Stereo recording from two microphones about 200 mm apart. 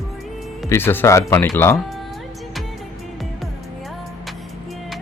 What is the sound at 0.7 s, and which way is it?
Speech, 10° left (ahead or behind).